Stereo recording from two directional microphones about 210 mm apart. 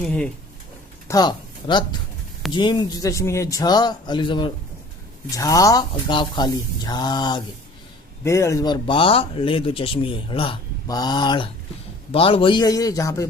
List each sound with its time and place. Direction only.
0.0 s speech: 5° left (ahead or behind)
1.0 s a man's voice: 20° left (ahead or behind)